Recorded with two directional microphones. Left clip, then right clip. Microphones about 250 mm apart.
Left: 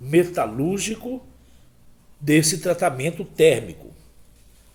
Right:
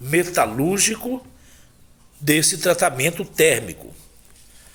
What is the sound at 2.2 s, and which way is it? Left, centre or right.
A man's voice, centre.